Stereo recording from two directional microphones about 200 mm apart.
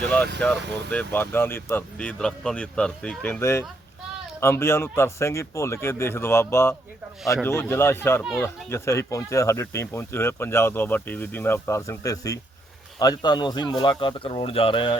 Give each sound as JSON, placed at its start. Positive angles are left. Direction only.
{"t": 0.0, "sound": "speech", "side_deg": 5}